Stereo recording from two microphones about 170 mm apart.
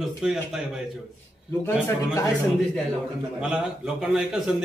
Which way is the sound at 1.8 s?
20° left (ahead or behind).